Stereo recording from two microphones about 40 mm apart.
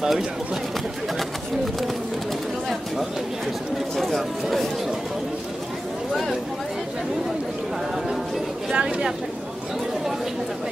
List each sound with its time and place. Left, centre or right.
0.0 s speech: centre
3.9 s a sound: centre
8.7 s a woman's voice: right